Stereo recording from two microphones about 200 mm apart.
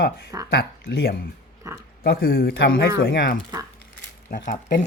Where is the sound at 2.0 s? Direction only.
50° left (ahead or behind).